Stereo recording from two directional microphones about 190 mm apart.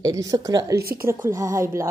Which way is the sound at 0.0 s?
20° right (ahead or behind).